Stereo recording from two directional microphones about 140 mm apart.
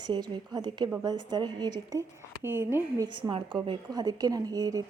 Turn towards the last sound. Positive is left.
turn(degrees=-25)  # may be behind; listen again after turning